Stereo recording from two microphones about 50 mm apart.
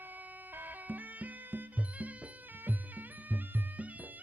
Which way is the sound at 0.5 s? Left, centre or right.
Right.